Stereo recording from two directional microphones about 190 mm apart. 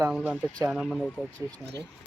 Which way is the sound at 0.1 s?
5° right (ahead or behind).